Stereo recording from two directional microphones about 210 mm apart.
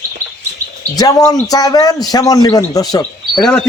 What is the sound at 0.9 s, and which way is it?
A man's voice, 15° left (ahead or behind).